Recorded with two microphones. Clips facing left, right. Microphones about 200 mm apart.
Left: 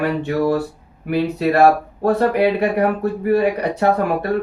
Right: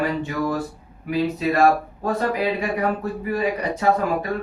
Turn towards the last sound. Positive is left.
turn(degrees=65)  # may be behind; listen again after turning